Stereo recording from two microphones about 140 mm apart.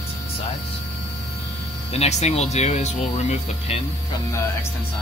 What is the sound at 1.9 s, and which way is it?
Speech, 50° left (ahead or behind).